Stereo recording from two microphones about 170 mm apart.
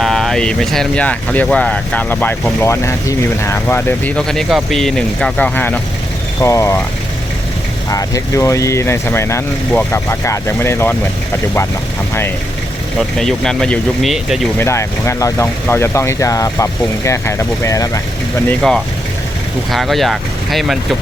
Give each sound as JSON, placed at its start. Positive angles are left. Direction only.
{"t": 0.0, "sound": "speech", "side_deg": 0}
{"t": 7.9, "sound": "speech", "side_deg": 20}
{"t": 13.0, "sound": "speech", "side_deg": 0}
{"t": 14.6, "sound": "speech", "side_deg": 15}
{"t": 19.7, "sound": "speech", "side_deg": 0}